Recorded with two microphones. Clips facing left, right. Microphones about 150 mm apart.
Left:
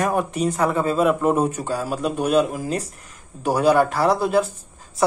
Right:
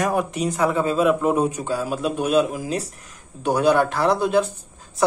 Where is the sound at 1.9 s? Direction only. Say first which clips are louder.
Left 1 dB; 5° right (ahead or behind).